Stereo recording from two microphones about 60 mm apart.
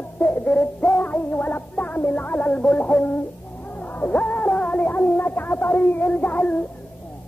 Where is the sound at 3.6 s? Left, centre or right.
Left.